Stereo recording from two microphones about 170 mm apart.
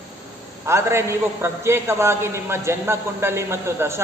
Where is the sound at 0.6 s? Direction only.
15° right (ahead or behind).